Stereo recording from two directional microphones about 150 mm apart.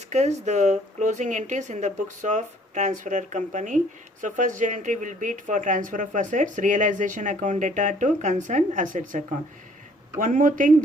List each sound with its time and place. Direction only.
0.1 s speech: 50° right (ahead or behind)